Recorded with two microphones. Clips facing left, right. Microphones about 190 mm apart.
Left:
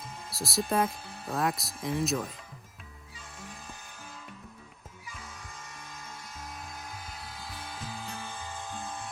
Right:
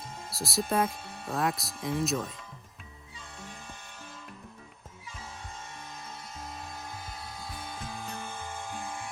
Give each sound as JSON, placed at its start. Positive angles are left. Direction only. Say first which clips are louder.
{"t": 0.3, "sound": "speech", "louder": "even", "side_deg": 0}
{"t": 7.4, "sound": "music", "louder": "right 1 dB", "side_deg": -20}